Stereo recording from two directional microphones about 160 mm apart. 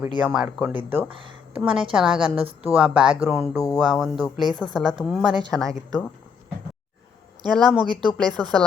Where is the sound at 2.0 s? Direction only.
35° right (ahead or behind).